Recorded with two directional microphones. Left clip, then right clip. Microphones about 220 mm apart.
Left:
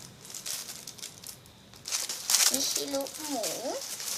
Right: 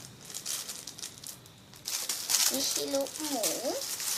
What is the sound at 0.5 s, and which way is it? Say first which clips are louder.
Crumpling: even; 10° right (ahead or behind).